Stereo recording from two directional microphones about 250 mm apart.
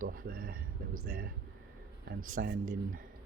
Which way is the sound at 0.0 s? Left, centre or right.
Right.